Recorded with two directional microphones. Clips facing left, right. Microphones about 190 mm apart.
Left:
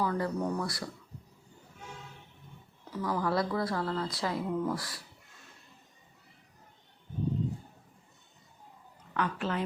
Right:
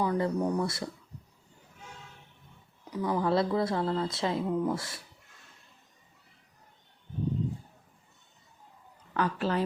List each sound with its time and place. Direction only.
0.0 s speech: 20° right (ahead or behind)
2.9 s speech: 20° right (ahead or behind)
9.1 s a woman's voice: 35° right (ahead or behind)